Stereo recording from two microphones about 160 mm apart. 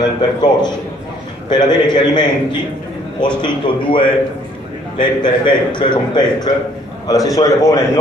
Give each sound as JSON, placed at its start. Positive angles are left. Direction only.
{"t": 0.0, "sound": "a man's voice", "side_deg": 25}